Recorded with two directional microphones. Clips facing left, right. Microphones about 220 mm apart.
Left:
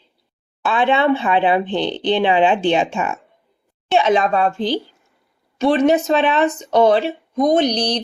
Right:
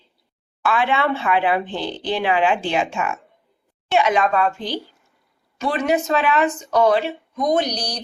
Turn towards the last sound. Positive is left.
turn(degrees=25)  # may be behind; listen again after turning